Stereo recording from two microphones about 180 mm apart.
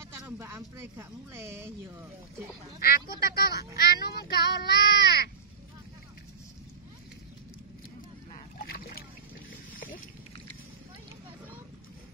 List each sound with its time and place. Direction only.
0.1 s speech: 15° right (ahead or behind)
2.8 s speech: 60° left (ahead or behind)
8.5 s splash: 55° left (ahead or behind)